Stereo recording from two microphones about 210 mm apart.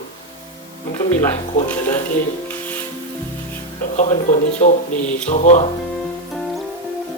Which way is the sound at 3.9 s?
35° left (ahead or behind).